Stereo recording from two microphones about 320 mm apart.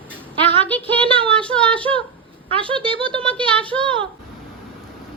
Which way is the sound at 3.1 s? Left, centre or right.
Centre.